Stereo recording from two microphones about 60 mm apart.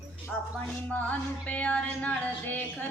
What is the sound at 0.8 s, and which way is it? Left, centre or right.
Music, left.